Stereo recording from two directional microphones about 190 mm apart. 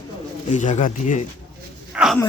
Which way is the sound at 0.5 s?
40° left (ahead or behind).